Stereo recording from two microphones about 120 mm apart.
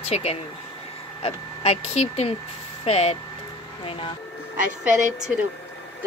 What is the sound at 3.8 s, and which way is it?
Speech, 50° left (ahead or behind).